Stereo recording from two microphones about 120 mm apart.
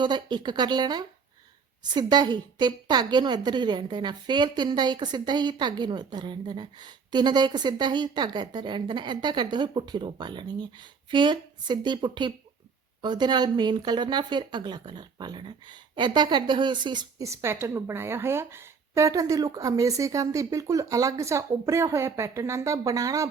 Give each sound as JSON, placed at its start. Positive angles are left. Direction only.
{"t": 0.0, "sound": "a woman's voice", "side_deg": -40}
{"t": 17.2, "sound": "a woman's voice", "side_deg": -20}